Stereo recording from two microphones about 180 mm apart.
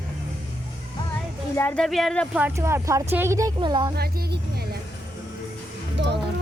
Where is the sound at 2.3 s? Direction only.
10° right (ahead or behind).